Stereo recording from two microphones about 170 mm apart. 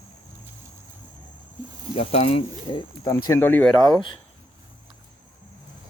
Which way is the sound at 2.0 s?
35° left (ahead or behind).